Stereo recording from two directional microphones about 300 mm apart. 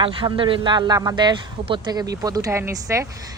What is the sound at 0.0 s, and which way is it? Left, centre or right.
A man's voice, centre.